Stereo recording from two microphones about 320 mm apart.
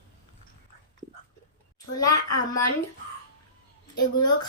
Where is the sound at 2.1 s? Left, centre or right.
Left.